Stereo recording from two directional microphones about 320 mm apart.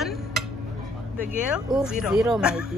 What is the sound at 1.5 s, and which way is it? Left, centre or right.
Speech, centre.